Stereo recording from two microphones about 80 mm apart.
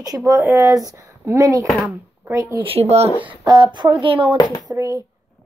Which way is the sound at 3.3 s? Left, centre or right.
Right.